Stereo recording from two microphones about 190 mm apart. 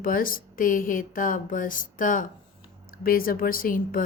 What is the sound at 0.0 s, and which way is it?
A woman's voice, 45° left (ahead or behind).